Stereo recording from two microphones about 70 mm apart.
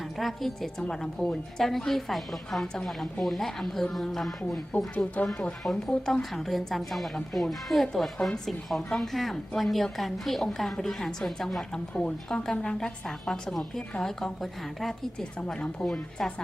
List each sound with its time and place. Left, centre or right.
0.0 s a woman's voice: centre
4.7 s speech: left
5.6 s a woman's voice: centre